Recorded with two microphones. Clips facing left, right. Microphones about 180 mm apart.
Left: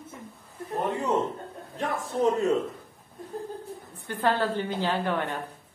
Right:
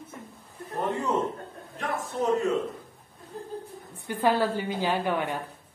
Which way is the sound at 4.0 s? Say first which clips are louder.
Right 2 dB; 10° right (ahead or behind).